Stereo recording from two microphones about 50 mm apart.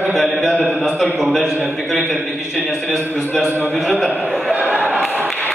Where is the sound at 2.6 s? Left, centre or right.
Right.